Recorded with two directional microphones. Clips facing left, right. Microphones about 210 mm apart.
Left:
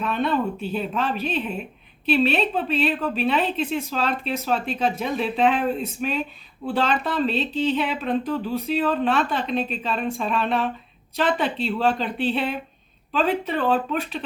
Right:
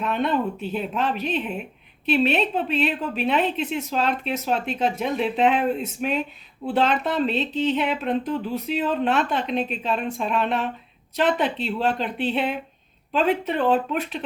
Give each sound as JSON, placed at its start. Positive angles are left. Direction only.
{"t": 0.1, "sound": "a woman's voice", "side_deg": -20}